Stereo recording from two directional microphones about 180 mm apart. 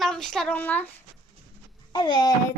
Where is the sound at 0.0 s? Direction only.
Centre (ahead or behind).